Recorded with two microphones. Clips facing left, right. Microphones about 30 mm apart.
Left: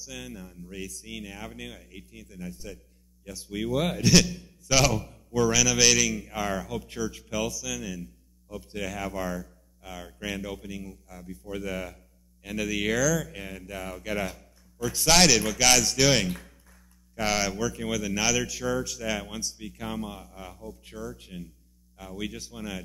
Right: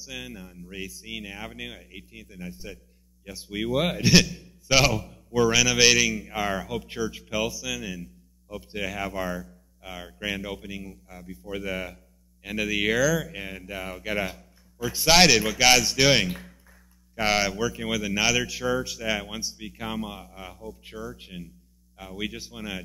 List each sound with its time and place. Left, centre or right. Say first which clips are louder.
0.0 s speech: right 2 dB; centre
4.9 s speech: right 2 dB; centre